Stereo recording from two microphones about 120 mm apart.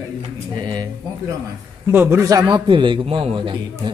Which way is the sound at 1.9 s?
20° right (ahead or behind).